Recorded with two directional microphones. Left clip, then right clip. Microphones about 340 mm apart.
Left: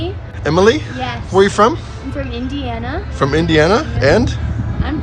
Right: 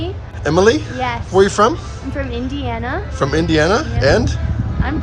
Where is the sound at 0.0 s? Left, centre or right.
Centre.